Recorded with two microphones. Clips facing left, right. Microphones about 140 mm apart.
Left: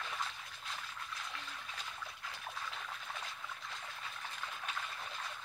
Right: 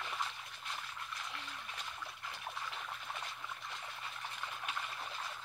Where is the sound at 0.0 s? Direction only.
10° right (ahead or behind).